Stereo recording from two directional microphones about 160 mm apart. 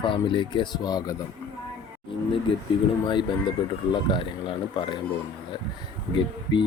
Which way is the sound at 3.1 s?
30° left (ahead or behind).